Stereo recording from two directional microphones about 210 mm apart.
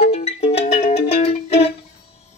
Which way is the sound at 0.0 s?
30° left (ahead or behind).